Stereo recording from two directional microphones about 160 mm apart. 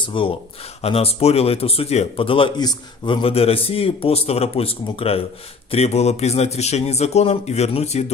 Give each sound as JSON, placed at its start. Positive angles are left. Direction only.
{"t": 0.0, "sound": "a man's voice", "side_deg": 30}